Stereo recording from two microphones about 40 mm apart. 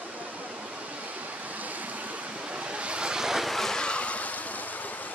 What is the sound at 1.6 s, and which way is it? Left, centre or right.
Vehicle, right.